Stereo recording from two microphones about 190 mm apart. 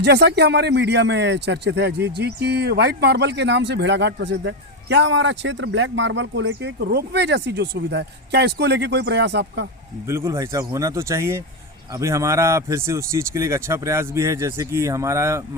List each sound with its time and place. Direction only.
0.0 s a man's voice: 60° right (ahead or behind)
10.1 s speech: 15° right (ahead or behind)